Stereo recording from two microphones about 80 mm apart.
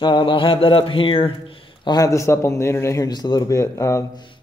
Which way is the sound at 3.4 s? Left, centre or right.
Left.